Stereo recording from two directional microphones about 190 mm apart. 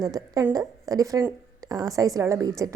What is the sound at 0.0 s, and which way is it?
A woman's voice, 20° right (ahead or behind).